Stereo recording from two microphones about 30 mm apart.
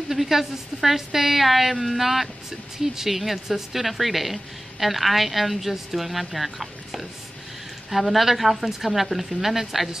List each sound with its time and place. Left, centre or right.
0.1 s a woman's voice: centre